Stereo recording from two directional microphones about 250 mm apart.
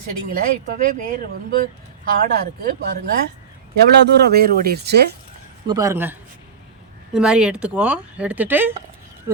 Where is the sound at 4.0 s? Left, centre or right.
Right.